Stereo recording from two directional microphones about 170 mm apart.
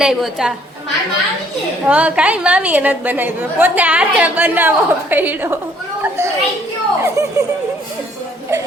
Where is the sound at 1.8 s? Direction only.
10° right (ahead or behind).